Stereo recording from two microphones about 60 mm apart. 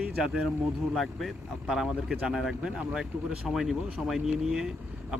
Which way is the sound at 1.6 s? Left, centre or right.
Centre.